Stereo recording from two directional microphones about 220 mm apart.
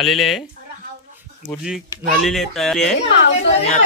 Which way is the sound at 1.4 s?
5° right (ahead or behind).